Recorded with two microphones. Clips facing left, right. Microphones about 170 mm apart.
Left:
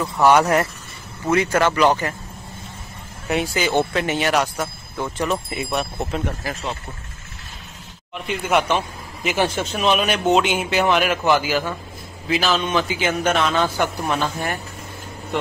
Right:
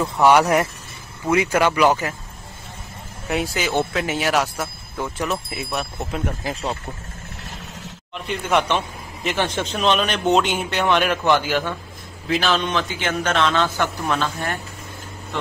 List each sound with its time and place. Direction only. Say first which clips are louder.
0.2 s speech: even; 10° right (ahead or behind)
3.3 s a man's voice: left 2 dB; centre (ahead or behind)
6.4 s speech: right 1 dB; 20° right (ahead or behind)
8.3 s a man's voice: left 1 dB; 5° left (ahead or behind)